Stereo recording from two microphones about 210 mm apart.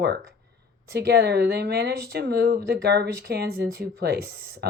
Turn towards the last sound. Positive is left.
turn(degrees=-50)  # may be behind; listen again after turning